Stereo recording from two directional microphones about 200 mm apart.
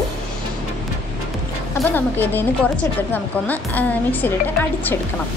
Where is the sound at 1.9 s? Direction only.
10° left (ahead or behind).